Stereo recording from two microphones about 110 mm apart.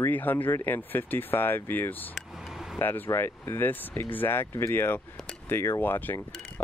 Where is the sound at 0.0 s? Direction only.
15° left (ahead or behind).